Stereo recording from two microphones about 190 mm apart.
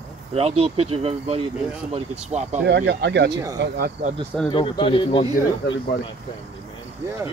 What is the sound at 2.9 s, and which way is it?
Speech, 65° right (ahead or behind).